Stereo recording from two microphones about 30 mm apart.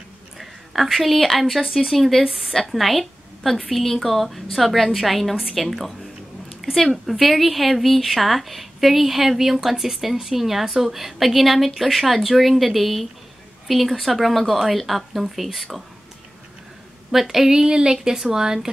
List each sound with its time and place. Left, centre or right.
0.4 s a sound: centre
1.1 s a woman's voice: centre
17.1 s speech: centre
17.5 s speech: right